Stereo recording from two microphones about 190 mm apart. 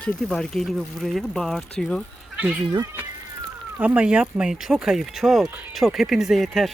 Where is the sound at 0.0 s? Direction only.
5° left (ahead or behind).